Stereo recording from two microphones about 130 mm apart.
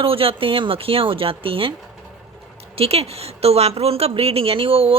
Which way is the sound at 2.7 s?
50° right (ahead or behind).